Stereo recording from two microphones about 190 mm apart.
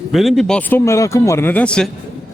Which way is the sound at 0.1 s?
Centre (ahead or behind).